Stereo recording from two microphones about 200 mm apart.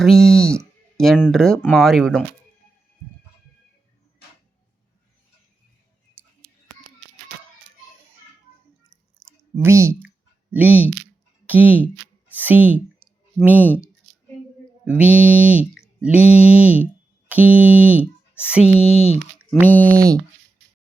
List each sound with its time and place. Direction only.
0.0 s speech: centre (ahead or behind)
6.2 s a sound: 10° right (ahead or behind)
9.2 s a sound: centre (ahead or behind)
9.6 s speech: 15° right (ahead or behind)
14.8 s speech: 5° right (ahead or behind)
18.8 s speech: 30° left (ahead or behind)
19.4 s speech: 10° left (ahead or behind)